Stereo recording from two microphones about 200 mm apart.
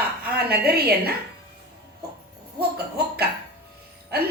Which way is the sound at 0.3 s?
50° right (ahead or behind).